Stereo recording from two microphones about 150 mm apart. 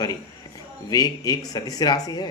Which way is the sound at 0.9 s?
25° left (ahead or behind).